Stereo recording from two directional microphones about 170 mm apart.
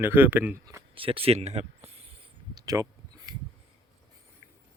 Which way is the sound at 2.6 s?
20° right (ahead or behind).